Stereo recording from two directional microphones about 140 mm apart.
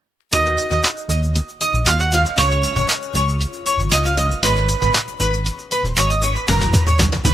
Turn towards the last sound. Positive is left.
turn(degrees=0)  # may be behind; listen again after turning